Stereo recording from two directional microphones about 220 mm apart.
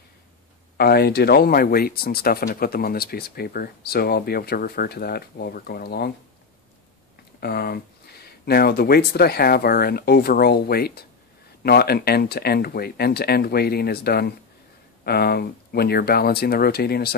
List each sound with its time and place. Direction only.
0.7 s speech: 45° left (ahead or behind)
7.3 s speech: 45° left (ahead or behind)